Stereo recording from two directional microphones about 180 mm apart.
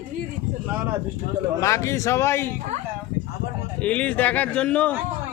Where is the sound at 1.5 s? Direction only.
15° left (ahead or behind).